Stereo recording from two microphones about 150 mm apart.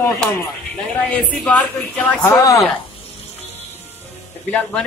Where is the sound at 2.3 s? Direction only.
20° left (ahead or behind).